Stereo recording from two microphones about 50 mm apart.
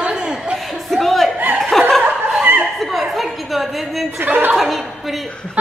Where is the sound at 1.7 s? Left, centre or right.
Centre.